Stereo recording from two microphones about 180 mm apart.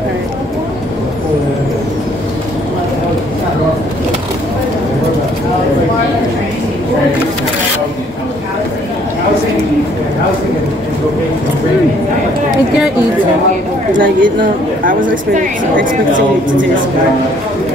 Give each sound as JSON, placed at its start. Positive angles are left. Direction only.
{"t": 13.9, "sound": "a woman's voice", "side_deg": -50}